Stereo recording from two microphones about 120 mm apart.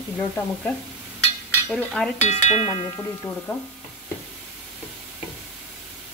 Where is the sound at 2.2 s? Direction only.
75° left (ahead or behind).